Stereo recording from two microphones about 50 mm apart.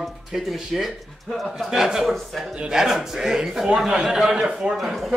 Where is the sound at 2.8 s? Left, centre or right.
Centre.